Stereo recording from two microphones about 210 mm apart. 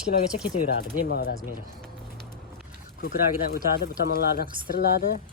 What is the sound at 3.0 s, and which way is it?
Speech, 50° left (ahead or behind).